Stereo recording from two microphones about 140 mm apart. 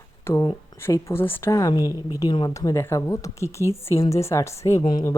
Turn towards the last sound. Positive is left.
turn(degrees=30)  # may be behind; listen again after turning